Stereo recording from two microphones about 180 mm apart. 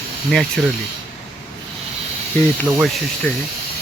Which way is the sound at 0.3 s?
5° left (ahead or behind).